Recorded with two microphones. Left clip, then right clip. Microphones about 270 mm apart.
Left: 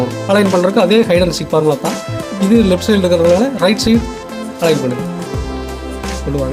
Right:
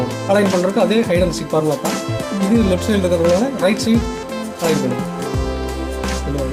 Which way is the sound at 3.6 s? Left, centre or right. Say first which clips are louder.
Left 3 dB; left.